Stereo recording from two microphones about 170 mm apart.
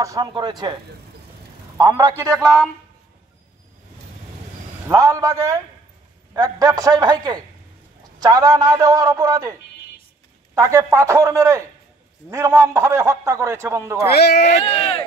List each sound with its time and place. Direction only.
0.0 s a man's voice: 20° right (ahead or behind)
1.8 s a man's voice: 25° right (ahead or behind)
2.4 s a man's voice: 5° left (ahead or behind)
4.8 s a man's voice: 20° right (ahead or behind)
14.0 s speech: 70° left (ahead or behind)
14.4 s speech: 35° left (ahead or behind)